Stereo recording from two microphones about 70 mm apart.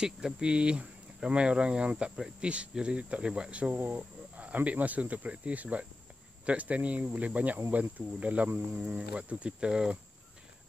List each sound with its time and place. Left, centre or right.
0.0 s speech: centre